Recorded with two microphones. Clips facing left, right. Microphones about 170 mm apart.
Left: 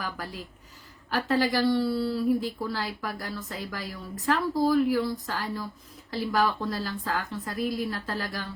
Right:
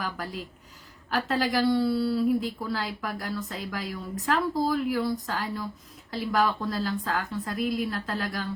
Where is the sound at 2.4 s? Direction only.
Centre (ahead or behind).